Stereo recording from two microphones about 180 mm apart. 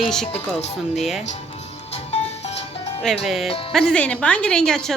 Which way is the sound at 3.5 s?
30° left (ahead or behind).